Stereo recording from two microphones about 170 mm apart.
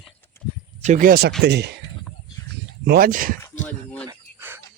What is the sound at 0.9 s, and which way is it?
Speech, 55° right (ahead or behind).